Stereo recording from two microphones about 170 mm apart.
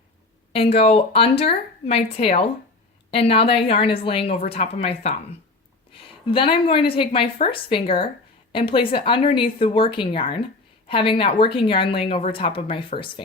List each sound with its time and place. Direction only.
0.5 s a woman's voice: 35° left (ahead or behind)